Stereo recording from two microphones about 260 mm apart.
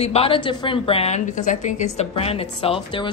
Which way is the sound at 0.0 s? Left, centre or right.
Left.